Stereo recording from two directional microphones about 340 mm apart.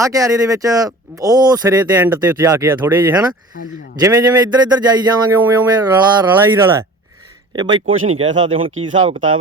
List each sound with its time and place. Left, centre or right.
0.0 s speech: centre
7.9 s speech: right
8.2 s speech: centre